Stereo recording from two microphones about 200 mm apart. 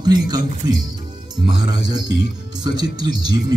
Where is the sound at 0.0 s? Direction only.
20° right (ahead or behind).